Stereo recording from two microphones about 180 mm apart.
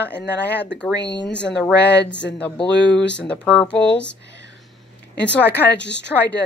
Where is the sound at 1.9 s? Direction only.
75° left (ahead or behind).